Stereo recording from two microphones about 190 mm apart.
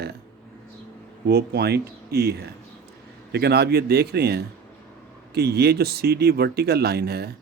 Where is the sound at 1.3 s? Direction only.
55° right (ahead or behind).